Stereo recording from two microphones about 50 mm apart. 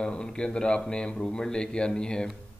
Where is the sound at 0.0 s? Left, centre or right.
Centre.